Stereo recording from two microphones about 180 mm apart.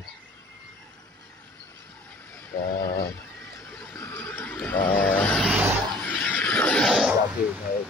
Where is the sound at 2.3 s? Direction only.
10° left (ahead or behind); by 5.7 s 5° right (ahead or behind).